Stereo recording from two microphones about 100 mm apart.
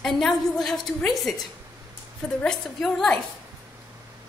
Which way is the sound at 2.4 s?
5° left (ahead or behind).